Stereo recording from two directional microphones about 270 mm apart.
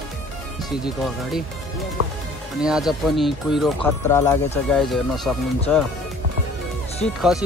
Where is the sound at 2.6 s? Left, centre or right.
Centre.